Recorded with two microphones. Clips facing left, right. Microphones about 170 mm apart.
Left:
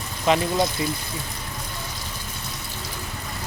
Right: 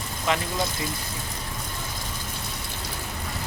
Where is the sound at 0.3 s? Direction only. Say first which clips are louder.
Left 6 dB; 20° left (ahead or behind).